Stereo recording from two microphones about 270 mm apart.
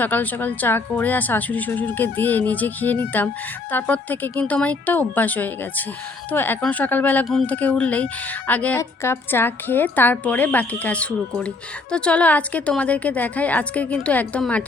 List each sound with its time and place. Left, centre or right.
0.0 s a woman's voice: centre